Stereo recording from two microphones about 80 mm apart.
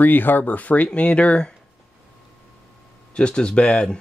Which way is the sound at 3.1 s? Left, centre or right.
Centre.